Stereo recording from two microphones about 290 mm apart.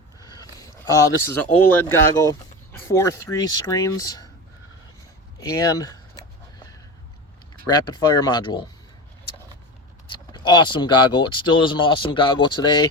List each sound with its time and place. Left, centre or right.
0.2 s speech: centre
5.5 s speech: centre
7.7 s speech: centre
10.1 s speech: centre